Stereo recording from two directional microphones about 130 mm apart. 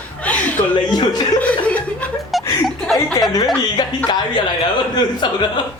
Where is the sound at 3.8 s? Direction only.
30° left (ahead or behind).